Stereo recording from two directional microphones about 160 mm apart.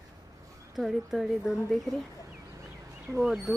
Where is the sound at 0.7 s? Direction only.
Centre (ahead or behind).